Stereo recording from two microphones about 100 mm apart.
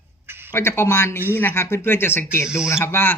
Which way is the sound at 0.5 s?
25° left (ahead or behind).